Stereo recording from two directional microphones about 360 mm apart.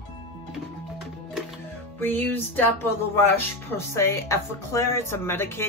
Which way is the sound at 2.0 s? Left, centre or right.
Centre.